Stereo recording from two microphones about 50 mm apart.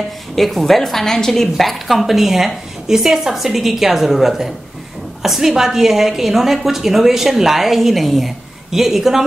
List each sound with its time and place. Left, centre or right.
0.4 s a woman's voice: centre